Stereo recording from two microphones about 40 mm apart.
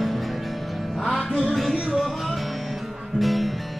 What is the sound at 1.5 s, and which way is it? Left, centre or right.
Music, centre.